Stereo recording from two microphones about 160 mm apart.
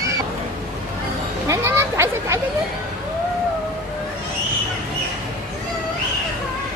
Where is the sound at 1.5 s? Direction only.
15° right (ahead or behind).